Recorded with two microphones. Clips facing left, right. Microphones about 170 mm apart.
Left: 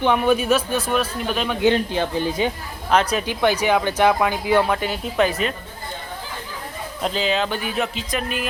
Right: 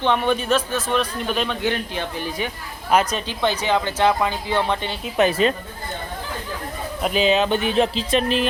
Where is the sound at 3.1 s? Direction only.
10° left (ahead or behind).